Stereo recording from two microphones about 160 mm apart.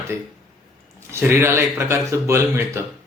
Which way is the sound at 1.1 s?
15° right (ahead or behind).